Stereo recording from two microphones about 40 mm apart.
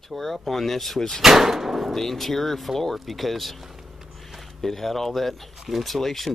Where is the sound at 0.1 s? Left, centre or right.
Centre.